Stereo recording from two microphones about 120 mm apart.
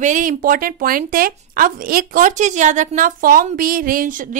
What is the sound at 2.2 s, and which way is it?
A woman's voice, 90° right.